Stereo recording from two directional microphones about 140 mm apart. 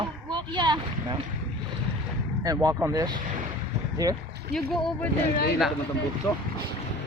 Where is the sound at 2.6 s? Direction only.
25° right (ahead or behind).